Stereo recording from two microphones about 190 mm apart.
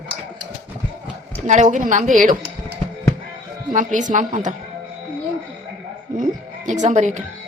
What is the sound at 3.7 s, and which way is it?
Speech, 40° right (ahead or behind).